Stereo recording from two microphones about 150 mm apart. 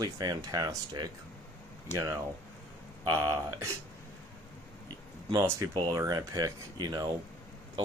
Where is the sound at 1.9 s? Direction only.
50° left (ahead or behind).